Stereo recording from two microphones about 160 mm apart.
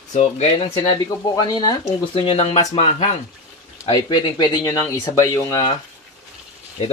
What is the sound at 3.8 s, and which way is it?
Speech, 25° left (ahead or behind).